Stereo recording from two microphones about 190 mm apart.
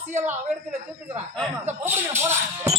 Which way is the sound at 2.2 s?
15° right (ahead or behind).